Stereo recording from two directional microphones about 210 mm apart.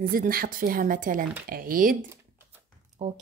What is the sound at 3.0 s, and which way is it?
Speech, 30° right (ahead or behind).